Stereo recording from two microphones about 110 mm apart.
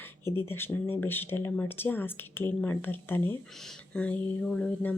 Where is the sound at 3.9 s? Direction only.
10° left (ahead or behind).